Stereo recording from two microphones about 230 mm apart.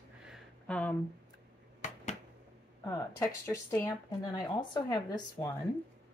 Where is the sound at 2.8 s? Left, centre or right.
Centre.